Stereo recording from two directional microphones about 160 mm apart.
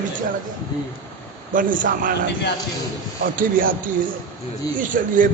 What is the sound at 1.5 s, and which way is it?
Speech, 55° right (ahead or behind).